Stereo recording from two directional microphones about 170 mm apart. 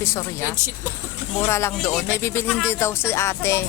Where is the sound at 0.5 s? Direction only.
15° right (ahead or behind).